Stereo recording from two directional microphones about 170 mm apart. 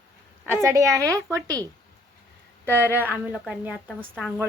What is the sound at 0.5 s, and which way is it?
A woman's voice, 15° right (ahead or behind).